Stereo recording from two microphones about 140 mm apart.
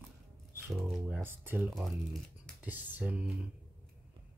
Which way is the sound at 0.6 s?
10° right (ahead or behind).